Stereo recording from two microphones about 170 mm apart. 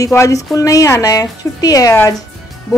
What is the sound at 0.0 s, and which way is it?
Speech, 20° left (ahead or behind).